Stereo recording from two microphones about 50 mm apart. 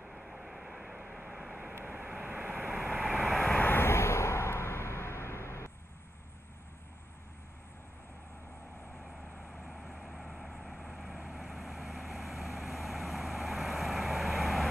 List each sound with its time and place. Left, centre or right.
0.0 s vehicle: centre
0.9 s vehicle: centre
1.5 s vehicle: right
2.7 s vehicle: centre
3.5 s vehicle: left
3.8 s a sound: left
9.5 s vehicle: centre
11.1 s vehicle: centre
11.4 s vehicle: centre